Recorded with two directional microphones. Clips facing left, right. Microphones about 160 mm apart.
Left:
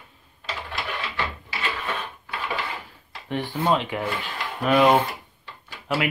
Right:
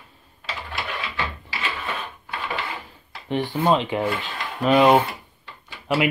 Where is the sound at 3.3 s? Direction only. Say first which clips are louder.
Right 3 dB; 15° right (ahead or behind).